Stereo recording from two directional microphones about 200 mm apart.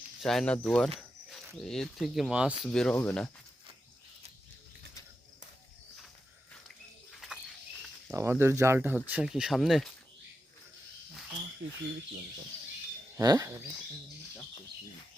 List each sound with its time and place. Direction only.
0.2 s speech: centre (ahead or behind)
2.6 s speech: 5° left (ahead or behind)
7.1 s bird: centre (ahead or behind)
8.1 s speech: 15° right (ahead or behind)
13.1 s speech: 15° right (ahead or behind)